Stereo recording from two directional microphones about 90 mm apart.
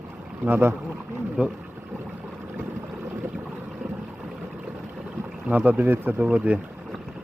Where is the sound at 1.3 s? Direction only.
10° right (ahead or behind).